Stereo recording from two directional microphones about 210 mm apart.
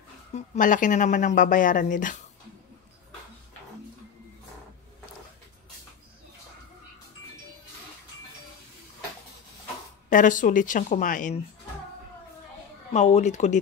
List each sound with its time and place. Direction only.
0.3 s a woman's voice: 40° left (ahead or behind)
10.0 s a woman's voice: 40° left (ahead or behind)
12.9 s a woman's voice: 35° left (ahead or behind)